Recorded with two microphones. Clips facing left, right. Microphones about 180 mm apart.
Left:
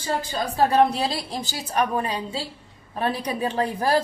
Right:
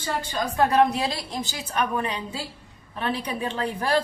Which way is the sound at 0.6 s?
35° left (ahead or behind).